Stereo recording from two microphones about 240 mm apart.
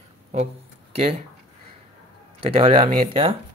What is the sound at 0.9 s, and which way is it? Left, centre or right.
Speech, right.